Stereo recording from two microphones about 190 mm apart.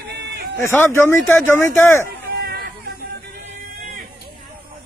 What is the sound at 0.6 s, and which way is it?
Speech, 10° left (ahead or behind).